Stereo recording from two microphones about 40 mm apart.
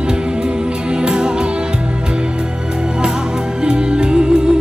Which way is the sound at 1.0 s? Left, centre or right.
Centre.